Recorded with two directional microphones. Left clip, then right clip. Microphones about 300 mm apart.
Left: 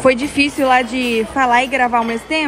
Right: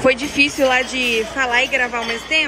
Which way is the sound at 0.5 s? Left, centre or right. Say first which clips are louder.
Left 2 dB; left.